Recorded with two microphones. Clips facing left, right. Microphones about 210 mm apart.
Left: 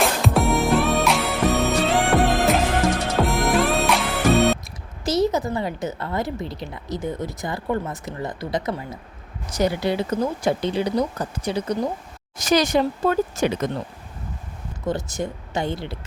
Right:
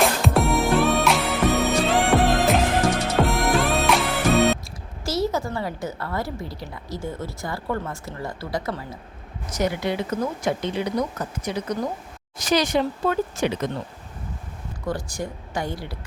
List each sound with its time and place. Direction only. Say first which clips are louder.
0.0 s music: even; centre (ahead or behind)
5.0 s a woman's voice: left 4 dB; 20° left (ahead or behind)
9.6 s speech: left 3 dB; 35° left (ahead or behind)
12.4 s speech: left 2 dB; 45° left (ahead or behind)
14.8 s a woman's voice: left 3 dB; 20° left (ahead or behind)